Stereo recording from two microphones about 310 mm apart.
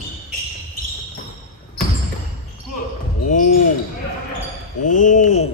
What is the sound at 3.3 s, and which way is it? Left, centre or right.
Speech, left.